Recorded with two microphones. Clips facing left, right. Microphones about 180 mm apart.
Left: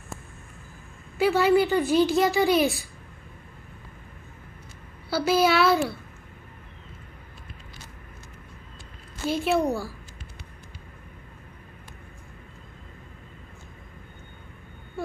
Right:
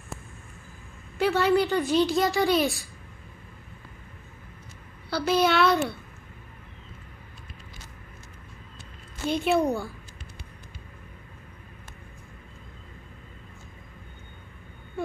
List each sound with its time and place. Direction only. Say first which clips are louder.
1.1 s a woman's voice: left 2 dB; 5° left (ahead or behind)
5.1 s a woman's voice: left 2 dB; 5° left (ahead or behind)
9.3 s a woman's voice: even; centre (ahead or behind)